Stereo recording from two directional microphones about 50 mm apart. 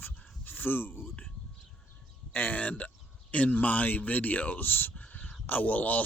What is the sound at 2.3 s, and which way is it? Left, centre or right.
A man's voice, left.